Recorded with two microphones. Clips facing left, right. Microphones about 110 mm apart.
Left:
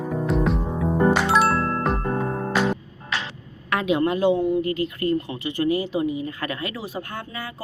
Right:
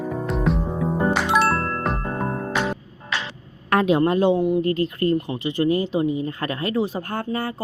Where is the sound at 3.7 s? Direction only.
40° right (ahead or behind).